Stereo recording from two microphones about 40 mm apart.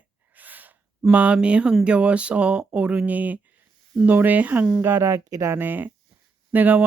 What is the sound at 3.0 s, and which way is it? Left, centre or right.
Speech, right.